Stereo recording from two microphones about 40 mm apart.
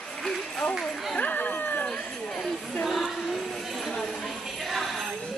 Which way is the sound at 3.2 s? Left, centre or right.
Centre.